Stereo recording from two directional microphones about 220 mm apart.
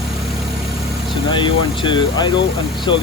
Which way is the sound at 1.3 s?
20° left (ahead or behind).